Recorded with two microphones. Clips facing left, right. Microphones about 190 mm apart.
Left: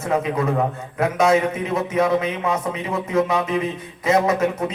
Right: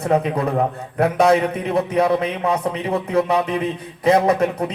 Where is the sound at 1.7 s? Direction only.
35° right (ahead or behind).